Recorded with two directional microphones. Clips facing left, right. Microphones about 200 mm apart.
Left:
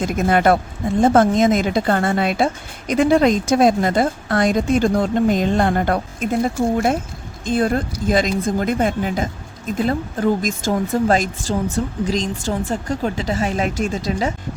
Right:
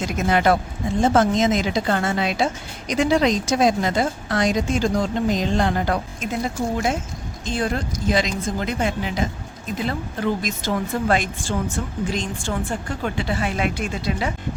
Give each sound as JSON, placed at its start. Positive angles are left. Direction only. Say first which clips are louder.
{"t": 0.0, "sound": "a woman's voice", "louder": "left 3 dB", "side_deg": 50}